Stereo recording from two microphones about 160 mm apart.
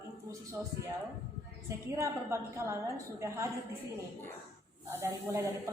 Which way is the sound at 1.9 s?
15° right (ahead or behind).